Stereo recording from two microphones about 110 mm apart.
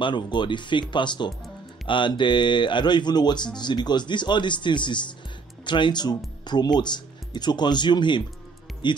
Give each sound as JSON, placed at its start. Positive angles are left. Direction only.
{"t": 0.0, "sound": "speech", "side_deg": 45}